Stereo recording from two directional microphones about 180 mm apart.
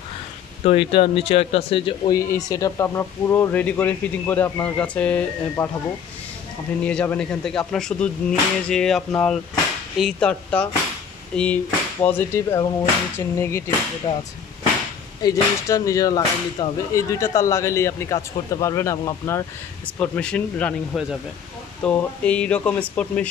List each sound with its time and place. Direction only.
0.7 s speech: 30° left (ahead or behind)
2.1 s speech: 20° left (ahead or behind)
6.8 s speech: 5° left (ahead or behind)
14.1 s speech: 30° left (ahead or behind)
15.2 s speech: 20° left (ahead or behind)